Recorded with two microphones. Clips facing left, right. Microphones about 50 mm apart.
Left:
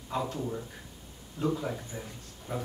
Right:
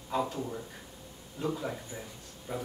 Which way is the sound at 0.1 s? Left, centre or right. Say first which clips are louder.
Right 1 dB; centre.